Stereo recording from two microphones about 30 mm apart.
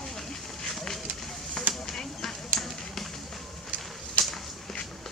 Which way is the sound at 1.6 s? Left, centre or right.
Centre.